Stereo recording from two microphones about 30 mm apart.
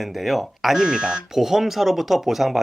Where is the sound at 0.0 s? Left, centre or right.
Centre.